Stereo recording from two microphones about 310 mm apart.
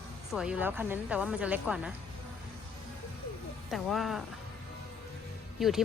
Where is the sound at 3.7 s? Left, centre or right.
Centre.